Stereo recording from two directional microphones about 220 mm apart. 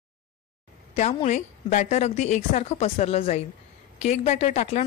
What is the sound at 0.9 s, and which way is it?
A woman's voice, 30° left (ahead or behind).